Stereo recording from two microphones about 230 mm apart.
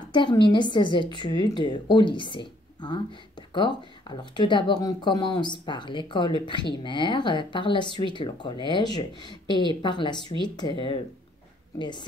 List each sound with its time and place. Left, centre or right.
0.1 s a woman's voice: centre